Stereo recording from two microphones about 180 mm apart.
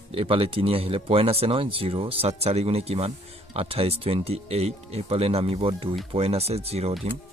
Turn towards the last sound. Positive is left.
turn(degrees=-35)  # may be behind; listen again after turning